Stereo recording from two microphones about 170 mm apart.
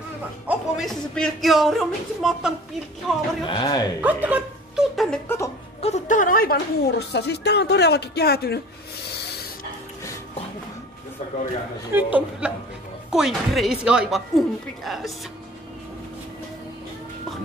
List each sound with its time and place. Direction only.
0.5 s speech: centre (ahead or behind)
3.4 s a man's voice: 25° left (ahead or behind)
4.0 s speech: 10° right (ahead or behind)
5.8 s speech: 40° left (ahead or behind); by 8.5 s 65° left (ahead or behind)
9.1 s rub: 75° left (ahead or behind)
11.9 s a man's voice: 10° right (ahead or behind)